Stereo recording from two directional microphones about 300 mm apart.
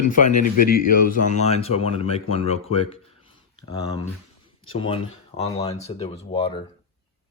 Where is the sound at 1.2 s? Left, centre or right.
Left.